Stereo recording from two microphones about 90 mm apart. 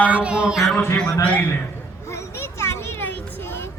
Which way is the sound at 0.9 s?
15° left (ahead or behind).